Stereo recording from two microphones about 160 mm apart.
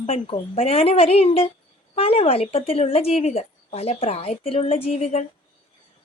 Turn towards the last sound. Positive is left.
turn(degrees=40)  # may be behind; listen again after turning